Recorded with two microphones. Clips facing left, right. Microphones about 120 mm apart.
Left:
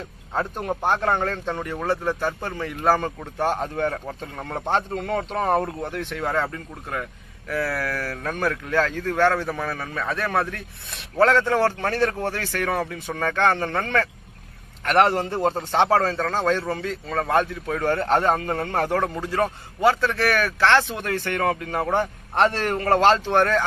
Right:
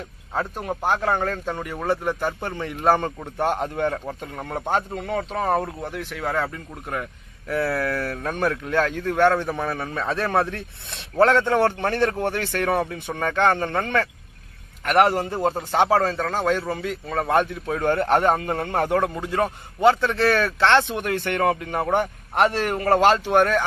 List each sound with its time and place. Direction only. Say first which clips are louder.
0.3 s a man's voice: left 1 dB; centre (ahead or behind); by 4.0 s 15° right (ahead or behind)
4.0 s a man's voice: right 1 dB; 5° right (ahead or behind)